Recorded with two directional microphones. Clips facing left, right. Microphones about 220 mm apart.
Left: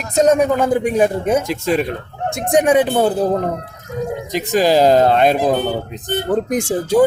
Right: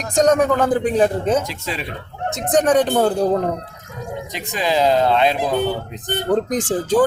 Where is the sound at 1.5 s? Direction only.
50° left (ahead or behind).